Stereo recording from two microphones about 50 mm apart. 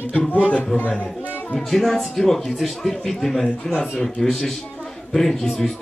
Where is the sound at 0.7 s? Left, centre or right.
Left.